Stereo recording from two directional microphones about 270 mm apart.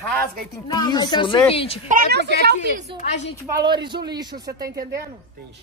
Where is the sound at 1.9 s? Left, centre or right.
Right.